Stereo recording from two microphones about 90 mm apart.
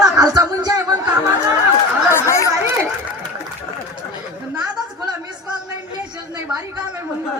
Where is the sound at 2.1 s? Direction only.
30° left (ahead or behind).